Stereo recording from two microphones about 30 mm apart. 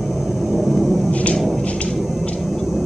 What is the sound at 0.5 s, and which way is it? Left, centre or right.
Vehicle, centre.